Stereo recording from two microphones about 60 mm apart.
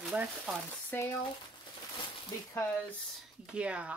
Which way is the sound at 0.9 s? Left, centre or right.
Left.